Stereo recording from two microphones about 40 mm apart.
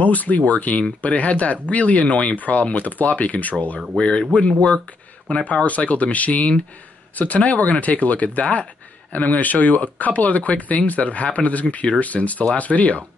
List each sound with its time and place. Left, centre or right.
0.0 s speech: left
3.9 s speech: left
5.3 s speech: left